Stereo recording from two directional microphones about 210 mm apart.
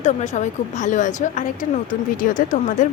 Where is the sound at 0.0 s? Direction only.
35° left (ahead or behind).